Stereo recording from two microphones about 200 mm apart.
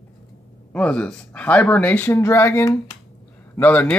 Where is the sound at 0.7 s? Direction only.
5° left (ahead or behind).